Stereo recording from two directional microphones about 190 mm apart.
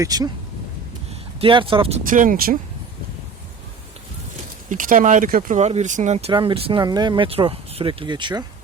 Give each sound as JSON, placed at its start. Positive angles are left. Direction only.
{"t": 0.0, "sound": "speech", "side_deg": -20}
{"t": 1.4, "sound": "speech", "side_deg": -30}
{"t": 2.0, "sound": "speech", "side_deg": -45}
{"t": 4.7, "sound": "speech", "side_deg": -40}